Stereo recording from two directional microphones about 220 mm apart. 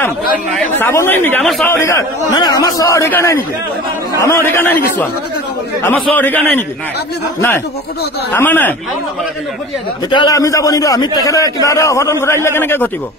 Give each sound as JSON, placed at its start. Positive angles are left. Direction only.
{"t": 0.6, "sound": "a man's voice", "side_deg": 10}
{"t": 1.9, "sound": "a man's voice", "side_deg": 15}
{"t": 5.9, "sound": "a man's voice", "side_deg": 5}
{"t": 10.1, "sound": "a man's voice", "side_deg": 20}